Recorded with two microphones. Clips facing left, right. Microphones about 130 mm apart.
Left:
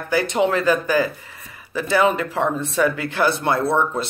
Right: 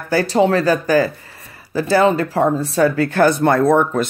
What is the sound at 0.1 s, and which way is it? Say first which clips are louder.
Speech: right 4 dB; 35° right (ahead or behind).